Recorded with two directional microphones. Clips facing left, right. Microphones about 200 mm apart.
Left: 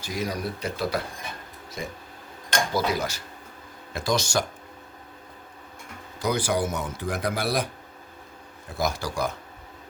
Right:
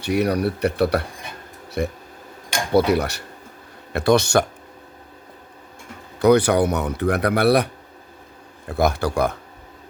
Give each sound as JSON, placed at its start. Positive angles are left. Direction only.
{"t": 0.0, "sound": "speech", "side_deg": -65}
{"t": 6.1, "sound": "speech", "side_deg": -65}
{"t": 8.7, "sound": "speech", "side_deg": -60}